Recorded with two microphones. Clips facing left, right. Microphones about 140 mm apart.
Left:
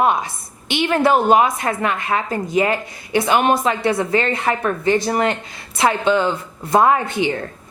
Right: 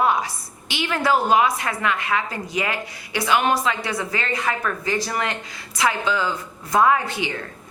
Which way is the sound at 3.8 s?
25° left (ahead or behind).